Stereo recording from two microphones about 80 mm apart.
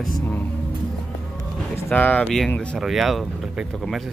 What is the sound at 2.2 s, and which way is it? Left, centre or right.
Speech, centre.